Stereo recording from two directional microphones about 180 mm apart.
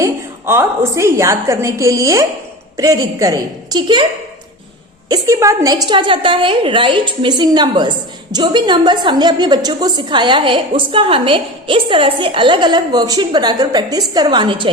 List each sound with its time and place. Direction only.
0.0 s a woman's voice: 15° right (ahead or behind)
5.0 s a woman's voice: 20° right (ahead or behind)